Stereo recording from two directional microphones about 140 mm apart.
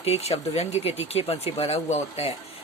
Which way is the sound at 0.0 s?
50° left (ahead or behind).